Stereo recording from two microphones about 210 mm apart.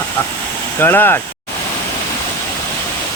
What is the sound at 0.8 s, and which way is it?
Speech, 10° left (ahead or behind).